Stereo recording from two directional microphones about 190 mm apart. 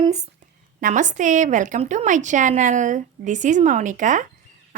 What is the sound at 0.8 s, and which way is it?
A woman's voice, 45° right (ahead or behind).